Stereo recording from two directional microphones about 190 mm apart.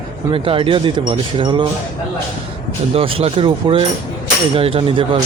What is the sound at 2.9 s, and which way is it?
Speech, 30° right (ahead or behind).